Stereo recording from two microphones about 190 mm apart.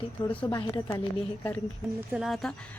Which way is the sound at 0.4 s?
25° left (ahead or behind).